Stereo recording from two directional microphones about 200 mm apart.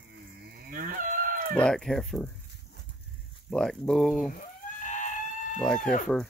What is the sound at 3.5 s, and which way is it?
Speech, 5° left (ahead or behind).